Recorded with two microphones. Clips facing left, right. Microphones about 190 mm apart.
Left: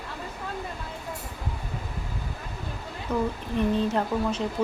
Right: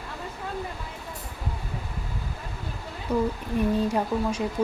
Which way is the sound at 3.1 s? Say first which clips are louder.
Right 2 dB; 10° right (ahead or behind).